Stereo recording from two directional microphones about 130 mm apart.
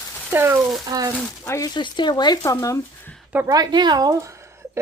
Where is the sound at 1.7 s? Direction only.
35° left (ahead or behind).